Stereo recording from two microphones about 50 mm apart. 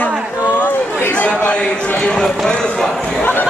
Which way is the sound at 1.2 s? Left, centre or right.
Left.